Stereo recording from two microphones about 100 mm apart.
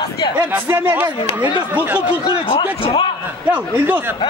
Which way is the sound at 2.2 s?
60° left (ahead or behind).